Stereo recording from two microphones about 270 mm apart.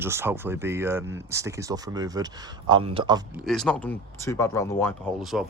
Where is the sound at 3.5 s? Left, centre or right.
Centre.